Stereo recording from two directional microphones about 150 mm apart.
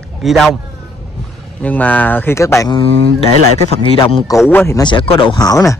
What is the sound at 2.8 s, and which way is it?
Speech, 40° left (ahead or behind).